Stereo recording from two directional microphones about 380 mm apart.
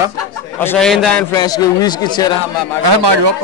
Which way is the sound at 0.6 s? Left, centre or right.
Centre.